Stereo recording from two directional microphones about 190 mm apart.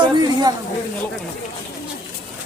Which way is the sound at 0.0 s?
20° right (ahead or behind).